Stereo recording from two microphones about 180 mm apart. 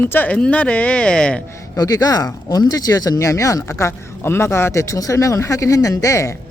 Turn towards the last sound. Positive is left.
turn(degrees=15)  # may be behind; listen again after turning